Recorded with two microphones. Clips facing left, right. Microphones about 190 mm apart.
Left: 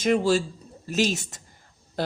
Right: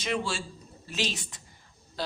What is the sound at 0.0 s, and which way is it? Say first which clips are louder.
Speech: left 10 dB; 45° left (ahead or behind).